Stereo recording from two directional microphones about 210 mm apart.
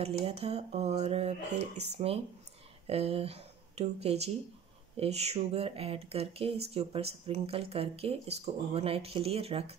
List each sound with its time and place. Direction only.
0.0 s speech: 30° right (ahead or behind)